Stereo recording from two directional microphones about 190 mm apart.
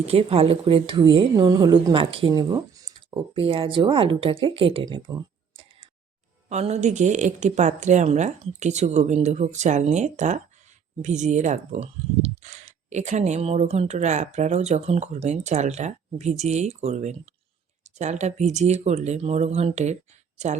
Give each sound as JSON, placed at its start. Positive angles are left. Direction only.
{"t": 0.0, "sound": "a woman's voice", "side_deg": -30}
{"t": 6.5, "sound": "speech", "side_deg": -35}